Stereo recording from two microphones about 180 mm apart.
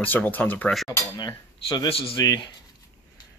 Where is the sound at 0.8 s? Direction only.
20° left (ahead or behind).